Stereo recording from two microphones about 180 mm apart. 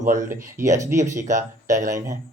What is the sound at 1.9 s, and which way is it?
Speech, 15° right (ahead or behind).